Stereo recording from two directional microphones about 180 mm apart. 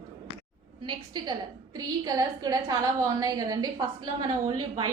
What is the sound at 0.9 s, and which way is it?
A woman's voice, 25° right (ahead or behind).